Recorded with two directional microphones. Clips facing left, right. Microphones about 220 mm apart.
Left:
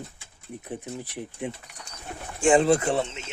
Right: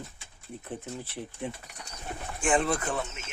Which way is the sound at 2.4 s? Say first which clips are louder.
Left 8 dB; 25° left (ahead or behind).